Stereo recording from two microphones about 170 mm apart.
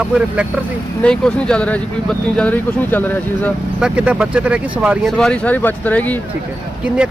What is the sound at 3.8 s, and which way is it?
Speech, 10° right (ahead or behind).